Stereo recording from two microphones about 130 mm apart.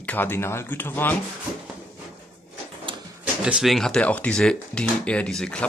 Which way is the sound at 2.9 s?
40° right (ahead or behind).